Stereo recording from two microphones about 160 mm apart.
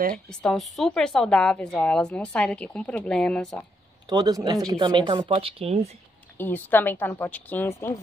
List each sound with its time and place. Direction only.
0.3 s a woman's voice: 5° left (ahead or behind)
4.1 s speech: 25° right (ahead or behind)
6.3 s a woman's voice: 10° left (ahead or behind)